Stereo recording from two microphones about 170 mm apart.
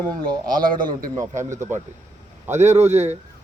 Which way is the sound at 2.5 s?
40° right (ahead or behind).